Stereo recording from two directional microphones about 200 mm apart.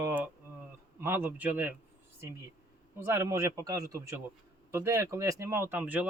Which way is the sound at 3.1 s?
15° right (ahead or behind).